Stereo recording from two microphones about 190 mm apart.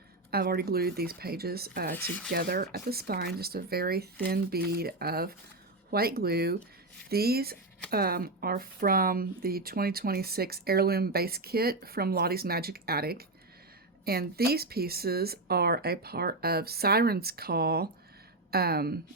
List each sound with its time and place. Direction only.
0.3 s speech: 55° right (ahead or behind)
2.0 s speech: 10° left (ahead or behind)
2.3 s a woman's voice: 55° right (ahead or behind)